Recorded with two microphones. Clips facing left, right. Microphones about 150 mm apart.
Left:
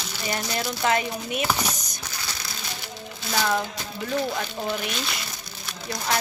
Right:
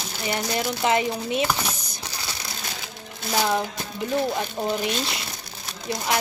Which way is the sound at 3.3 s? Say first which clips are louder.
Right 2 dB; 20° right (ahead or behind).